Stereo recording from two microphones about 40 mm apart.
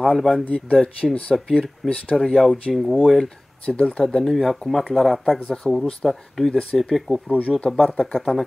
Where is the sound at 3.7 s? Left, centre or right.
Left.